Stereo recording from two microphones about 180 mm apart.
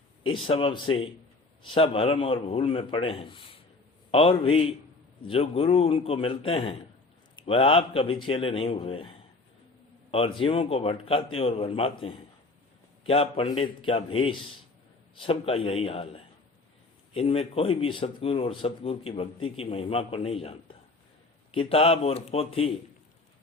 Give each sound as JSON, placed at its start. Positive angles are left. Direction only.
{"t": 0.3, "sound": "speech", "side_deg": 30}